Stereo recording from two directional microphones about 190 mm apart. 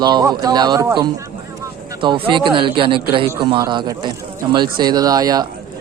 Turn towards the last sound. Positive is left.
turn(degrees=-20)  # may be behind; listen again after turning